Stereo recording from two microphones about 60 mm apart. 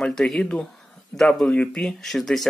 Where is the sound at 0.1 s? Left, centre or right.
Centre.